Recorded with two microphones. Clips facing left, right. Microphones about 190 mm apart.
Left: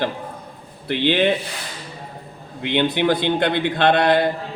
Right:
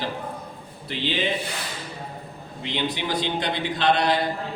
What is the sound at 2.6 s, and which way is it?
Speech, 60° left (ahead or behind).